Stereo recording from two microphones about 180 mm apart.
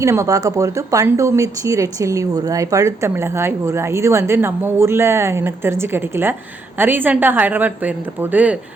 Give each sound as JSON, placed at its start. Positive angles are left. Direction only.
{"t": 0.0, "sound": "speech", "side_deg": -15}